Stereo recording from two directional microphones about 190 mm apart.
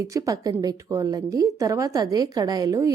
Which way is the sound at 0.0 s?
15° right (ahead or behind).